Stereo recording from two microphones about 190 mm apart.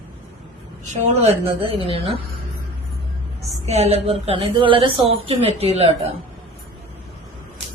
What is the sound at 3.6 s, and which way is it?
A woman's voice, 35° right (ahead or behind).